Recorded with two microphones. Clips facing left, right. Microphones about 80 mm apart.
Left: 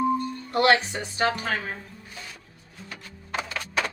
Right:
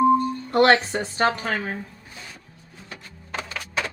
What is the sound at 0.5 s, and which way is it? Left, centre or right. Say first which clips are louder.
Speech: right 3 dB; right.